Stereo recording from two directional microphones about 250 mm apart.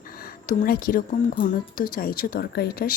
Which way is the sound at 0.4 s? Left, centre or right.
Left.